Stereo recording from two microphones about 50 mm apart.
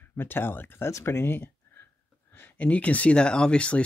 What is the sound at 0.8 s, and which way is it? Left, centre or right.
Speech, left.